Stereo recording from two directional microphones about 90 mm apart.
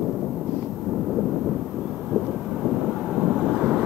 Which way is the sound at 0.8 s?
5° right (ahead or behind).